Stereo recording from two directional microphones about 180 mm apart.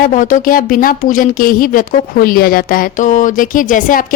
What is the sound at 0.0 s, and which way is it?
Speech, 45° left (ahead or behind).